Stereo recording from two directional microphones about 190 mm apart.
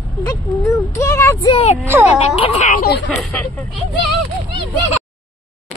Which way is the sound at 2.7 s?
50° left (ahead or behind).